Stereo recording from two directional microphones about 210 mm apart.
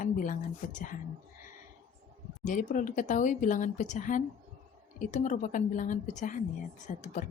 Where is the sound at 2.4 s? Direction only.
40° left (ahead or behind).